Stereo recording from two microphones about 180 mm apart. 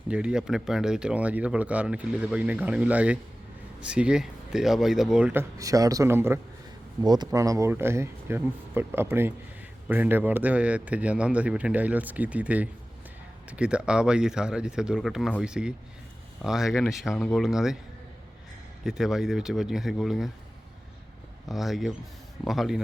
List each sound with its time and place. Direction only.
0.1 s speech: 5° right (ahead or behind)
18.9 s speech: centre (ahead or behind)
21.5 s speech: centre (ahead or behind)